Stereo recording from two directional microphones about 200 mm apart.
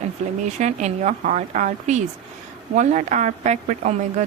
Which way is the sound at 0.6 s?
35° right (ahead or behind).